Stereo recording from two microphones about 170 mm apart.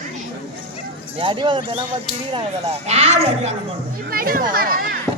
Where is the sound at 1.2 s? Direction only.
30° right (ahead or behind).